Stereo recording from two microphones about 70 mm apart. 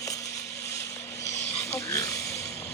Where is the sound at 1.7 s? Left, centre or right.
Left.